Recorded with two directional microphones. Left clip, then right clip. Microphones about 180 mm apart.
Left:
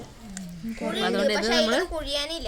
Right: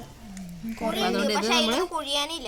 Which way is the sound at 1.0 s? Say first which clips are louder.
Left 2 dB; 5° right (ahead or behind).